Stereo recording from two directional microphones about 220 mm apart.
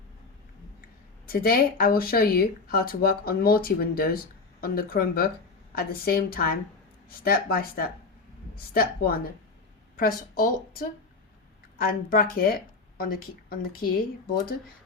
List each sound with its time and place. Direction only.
1.3 s speech: 45° left (ahead or behind)